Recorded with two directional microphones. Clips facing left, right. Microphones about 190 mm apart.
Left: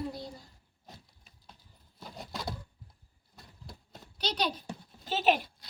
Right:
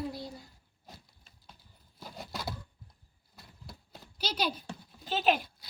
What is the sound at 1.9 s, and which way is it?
Patter, centre (ahead or behind).